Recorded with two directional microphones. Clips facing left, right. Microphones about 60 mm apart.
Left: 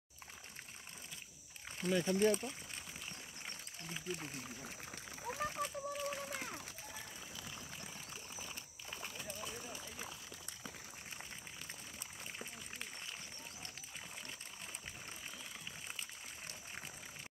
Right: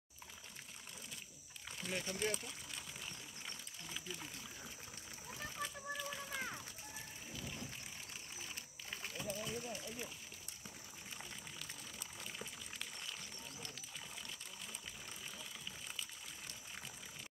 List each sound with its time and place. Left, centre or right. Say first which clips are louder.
1.8 s speech: left 9 dB; left
4.2 s a sound: left 4 dB; left
5.2 s splash: left 6 dB; left